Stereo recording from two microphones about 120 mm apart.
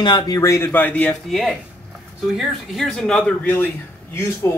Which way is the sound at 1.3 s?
Centre (ahead or behind).